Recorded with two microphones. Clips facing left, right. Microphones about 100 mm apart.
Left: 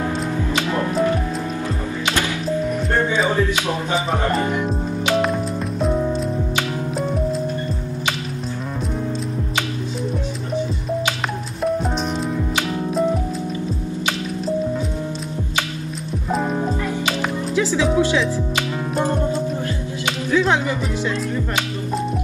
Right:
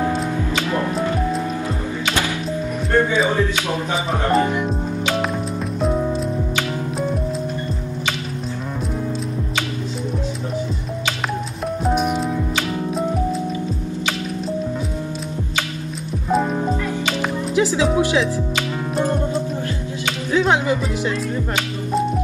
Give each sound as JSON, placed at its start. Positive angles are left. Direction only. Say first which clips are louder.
{"t": 0.7, "sound": "music", "louder": "left 2 dB", "side_deg": 0}
{"t": 4.5, "sound": "speech", "louder": "even", "side_deg": 0}
{"t": 11.6, "sound": "music", "louder": "right 1 dB", "side_deg": -5}
{"t": 16.3, "sound": "music", "louder": "right 2 dB", "side_deg": 0}
{"t": 17.6, "sound": "music", "louder": "right 2 dB", "side_deg": -20}
{"t": 17.9, "sound": "speech", "louder": "left 1 dB", "side_deg": -20}
{"t": 20.2, "sound": "music", "louder": "right 1 dB", "side_deg": -20}